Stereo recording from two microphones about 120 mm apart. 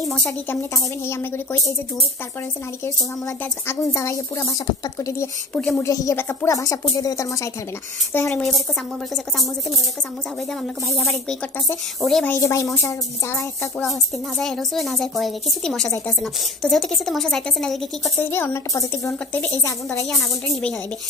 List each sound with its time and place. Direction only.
1.0 s speech: 20° left (ahead or behind)
3.6 s speech: 25° left (ahead or behind)
8.1 s speech: 20° left (ahead or behind)
8.4 s a woman's voice: centre (ahead or behind)
10.9 s a woman's voice: centre (ahead or behind)
12.3 s speech: 25° left (ahead or behind)
14.4 s a woman's voice: 5° left (ahead or behind)
18.1 s speech: 15° left (ahead or behind)
19.9 s a woman's voice: centre (ahead or behind)